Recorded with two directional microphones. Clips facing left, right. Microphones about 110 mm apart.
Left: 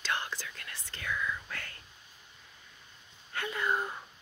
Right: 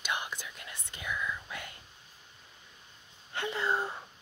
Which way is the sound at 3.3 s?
25° right (ahead or behind).